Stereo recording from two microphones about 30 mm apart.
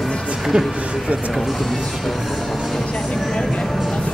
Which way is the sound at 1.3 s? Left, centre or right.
Centre.